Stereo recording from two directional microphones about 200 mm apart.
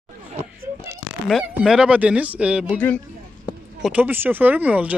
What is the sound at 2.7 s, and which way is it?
Speech, 5° left (ahead or behind).